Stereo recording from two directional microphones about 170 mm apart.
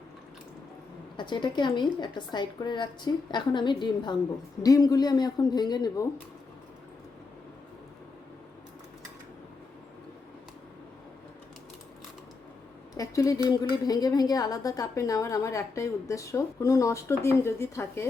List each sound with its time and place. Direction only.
1.1 s a woman's voice: 25° left (ahead or behind)
12.9 s a woman's voice: 20° left (ahead or behind)